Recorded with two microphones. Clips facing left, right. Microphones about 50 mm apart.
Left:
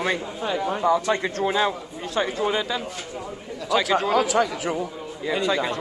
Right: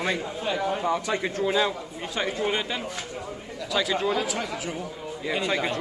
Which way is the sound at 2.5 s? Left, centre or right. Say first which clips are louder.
Left 3 dB; right.